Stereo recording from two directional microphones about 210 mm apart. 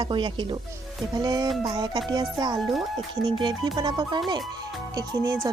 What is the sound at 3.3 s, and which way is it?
Speech, 20° right (ahead or behind).